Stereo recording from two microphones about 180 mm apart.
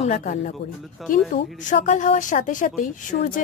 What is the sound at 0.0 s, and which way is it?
Speech, 40° left (ahead or behind).